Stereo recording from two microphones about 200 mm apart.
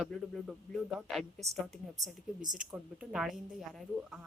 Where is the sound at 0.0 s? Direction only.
Centre (ahead or behind).